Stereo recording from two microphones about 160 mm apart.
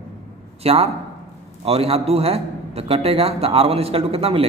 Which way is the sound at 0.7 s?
40° right (ahead or behind).